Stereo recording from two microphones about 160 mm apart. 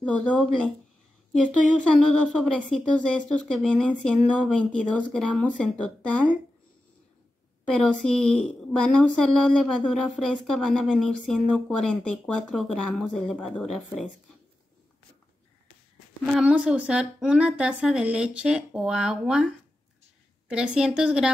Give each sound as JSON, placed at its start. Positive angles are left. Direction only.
{"t": 0.0, "sound": "a woman's voice", "side_deg": 5}
{"t": 7.7, "sound": "a woman's voice", "side_deg": 5}
{"t": 16.3, "sound": "a woman's voice", "side_deg": -5}